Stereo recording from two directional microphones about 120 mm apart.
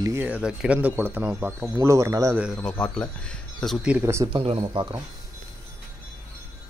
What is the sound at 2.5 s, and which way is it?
Speech, 10° left (ahead or behind).